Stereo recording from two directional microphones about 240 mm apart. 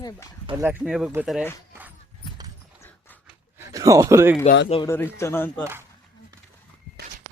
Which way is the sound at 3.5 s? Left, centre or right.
Centre.